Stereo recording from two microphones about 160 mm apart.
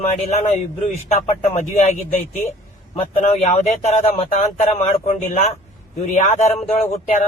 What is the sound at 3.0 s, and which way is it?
Speech, 40° left (ahead or behind).